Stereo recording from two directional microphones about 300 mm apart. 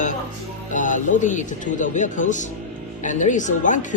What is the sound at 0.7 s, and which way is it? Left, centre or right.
Speech, left.